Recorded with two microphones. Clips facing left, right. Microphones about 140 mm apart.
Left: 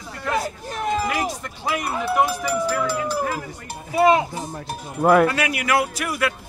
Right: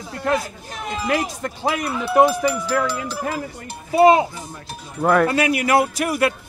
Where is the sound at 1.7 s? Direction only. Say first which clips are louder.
Even; 30° right (ahead or behind).